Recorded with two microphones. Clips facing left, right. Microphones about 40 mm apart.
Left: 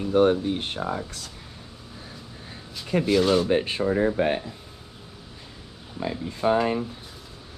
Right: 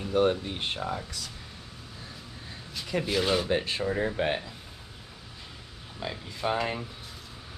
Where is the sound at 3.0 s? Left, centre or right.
Centre.